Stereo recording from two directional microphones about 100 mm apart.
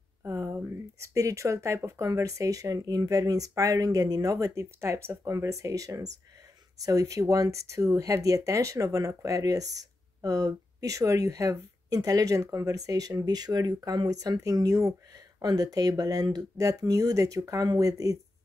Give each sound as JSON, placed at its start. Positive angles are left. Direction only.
{"t": 0.2, "sound": "speech", "side_deg": -30}